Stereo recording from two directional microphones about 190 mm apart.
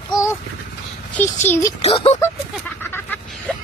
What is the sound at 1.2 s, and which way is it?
Speech, 10° left (ahead or behind).